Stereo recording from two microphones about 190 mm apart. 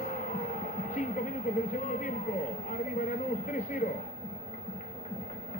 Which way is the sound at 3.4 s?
45° left (ahead or behind).